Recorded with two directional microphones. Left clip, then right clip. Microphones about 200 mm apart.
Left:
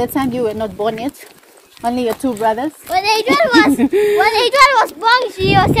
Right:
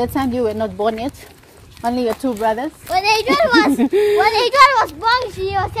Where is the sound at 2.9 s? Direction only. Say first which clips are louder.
Left 1 dB; 40° right (ahead or behind).